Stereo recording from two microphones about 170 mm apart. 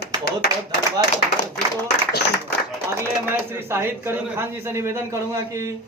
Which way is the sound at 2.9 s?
15° right (ahead or behind).